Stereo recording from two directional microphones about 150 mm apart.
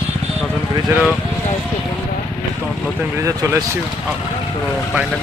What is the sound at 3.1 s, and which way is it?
Speech, 20° right (ahead or behind).